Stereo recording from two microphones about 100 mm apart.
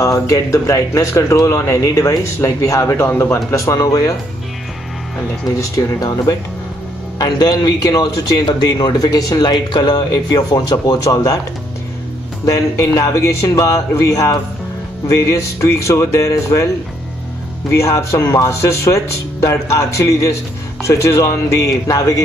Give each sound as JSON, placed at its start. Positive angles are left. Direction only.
{"t": 0.0, "sound": "speech", "side_deg": 35}
{"t": 3.5, "sound": "speech", "side_deg": 35}
{"t": 5.6, "sound": "speech", "side_deg": 35}
{"t": 12.4, "sound": "speech", "side_deg": 35}